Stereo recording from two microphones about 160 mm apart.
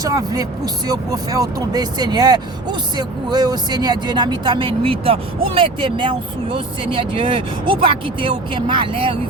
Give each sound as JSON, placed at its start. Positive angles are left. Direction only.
{"t": 0.0, "sound": "speech", "side_deg": -25}